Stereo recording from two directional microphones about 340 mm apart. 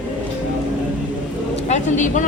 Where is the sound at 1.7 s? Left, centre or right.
Left.